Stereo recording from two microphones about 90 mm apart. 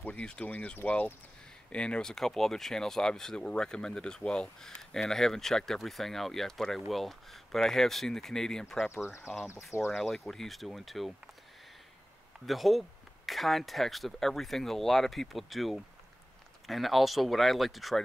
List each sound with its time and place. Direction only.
0.0 s speech: 15° left (ahead or behind)
8.9 s speech: 30° left (ahead or behind)
9.8 s speech: centre (ahead or behind)
12.4 s speech: centre (ahead or behind)